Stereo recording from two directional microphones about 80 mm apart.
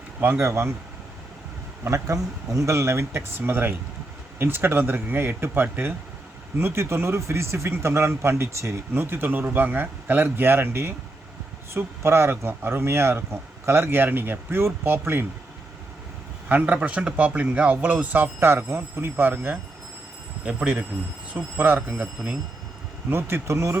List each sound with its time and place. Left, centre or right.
0.2 s speech: right
1.8 s speech: right
16.5 s speech: centre
21.3 s speech: right